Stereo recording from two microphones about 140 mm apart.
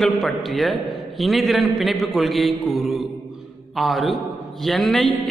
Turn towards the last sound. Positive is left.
turn(degrees=0)  # may be behind; listen again after turning